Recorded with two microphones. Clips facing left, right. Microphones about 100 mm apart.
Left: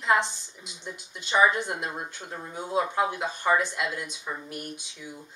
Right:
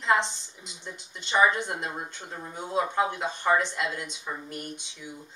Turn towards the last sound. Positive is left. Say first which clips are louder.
# even
turn(degrees=5)  # may be behind; listen again after turning